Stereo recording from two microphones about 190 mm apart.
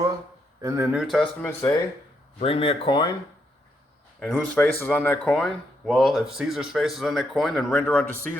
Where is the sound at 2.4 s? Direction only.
30° left (ahead or behind).